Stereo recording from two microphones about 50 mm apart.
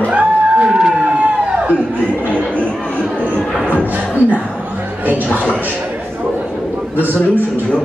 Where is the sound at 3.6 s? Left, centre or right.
Right.